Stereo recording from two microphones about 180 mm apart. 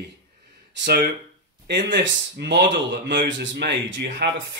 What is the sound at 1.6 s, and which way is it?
Speech, 75° right (ahead or behind).